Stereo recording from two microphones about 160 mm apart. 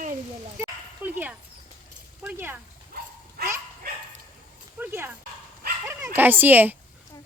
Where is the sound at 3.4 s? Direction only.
75° right (ahead or behind).